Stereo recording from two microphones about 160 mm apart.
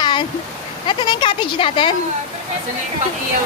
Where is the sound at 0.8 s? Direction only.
30° left (ahead or behind).